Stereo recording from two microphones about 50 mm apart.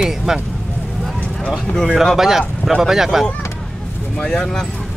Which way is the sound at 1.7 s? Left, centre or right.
Centre.